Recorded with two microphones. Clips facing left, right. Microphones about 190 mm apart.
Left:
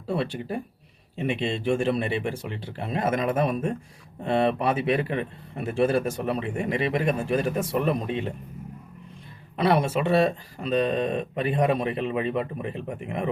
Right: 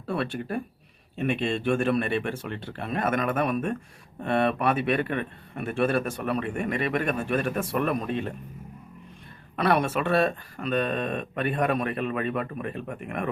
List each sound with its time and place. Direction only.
0.1 s a man's voice: 20° left (ahead or behind)
9.6 s a man's voice: 25° left (ahead or behind)